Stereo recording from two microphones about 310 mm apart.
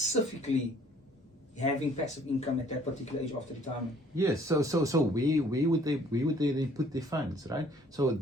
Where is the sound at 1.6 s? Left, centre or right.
Left.